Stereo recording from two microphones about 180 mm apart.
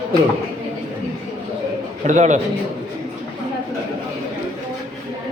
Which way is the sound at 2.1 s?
40° right (ahead or behind).